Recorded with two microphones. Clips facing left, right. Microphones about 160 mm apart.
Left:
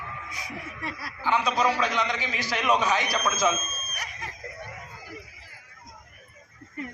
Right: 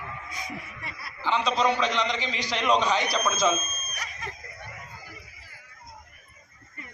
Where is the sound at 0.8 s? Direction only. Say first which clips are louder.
Left 5 dB; 90° left.